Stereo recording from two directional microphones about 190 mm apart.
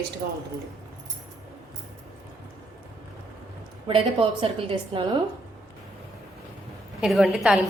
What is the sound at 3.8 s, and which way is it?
A woman's voice, 30° right (ahead or behind).